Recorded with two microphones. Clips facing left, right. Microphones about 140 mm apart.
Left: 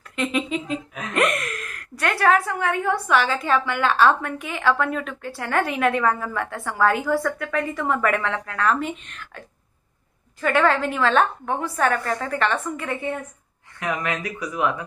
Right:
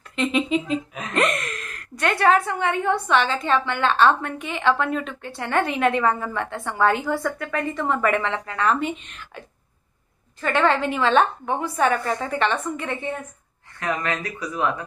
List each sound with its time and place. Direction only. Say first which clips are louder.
0.1 s speech: right 3 dB; 5° left (ahead or behind)
10.4 s speech: left 1 dB; 5° left (ahead or behind)